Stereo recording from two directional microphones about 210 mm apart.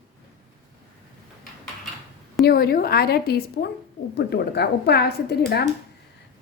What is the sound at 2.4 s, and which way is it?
A woman's voice, 45° left (ahead or behind).